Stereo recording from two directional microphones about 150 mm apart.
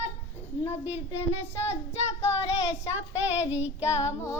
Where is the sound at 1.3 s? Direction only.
45° left (ahead or behind).